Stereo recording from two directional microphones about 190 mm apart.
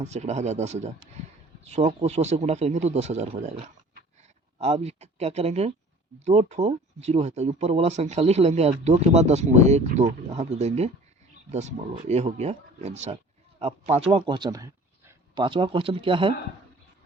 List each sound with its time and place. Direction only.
0.0 s speech: 35° right (ahead or behind)
4.5 s speech: 35° right (ahead or behind)